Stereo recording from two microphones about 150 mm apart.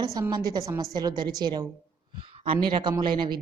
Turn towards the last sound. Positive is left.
turn(degrees=-30)  # may be behind; listen again after turning